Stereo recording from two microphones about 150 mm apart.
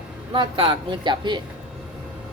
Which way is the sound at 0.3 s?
35° right (ahead or behind).